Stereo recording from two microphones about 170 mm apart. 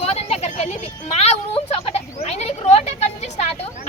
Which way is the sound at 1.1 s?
35° left (ahead or behind).